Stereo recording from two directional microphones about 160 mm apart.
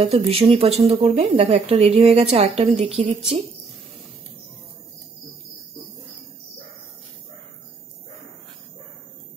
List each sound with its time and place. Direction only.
0.0 s speech: 35° right (ahead or behind)